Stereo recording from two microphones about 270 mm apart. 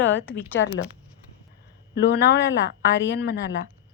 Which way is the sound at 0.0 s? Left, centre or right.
Left.